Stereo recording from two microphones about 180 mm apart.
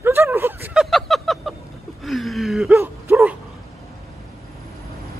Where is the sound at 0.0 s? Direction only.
10° right (ahead or behind).